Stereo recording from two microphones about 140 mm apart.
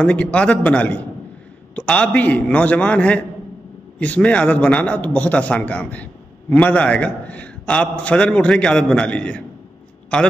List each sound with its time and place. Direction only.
0.0 s a man's voice: 10° left (ahead or behind)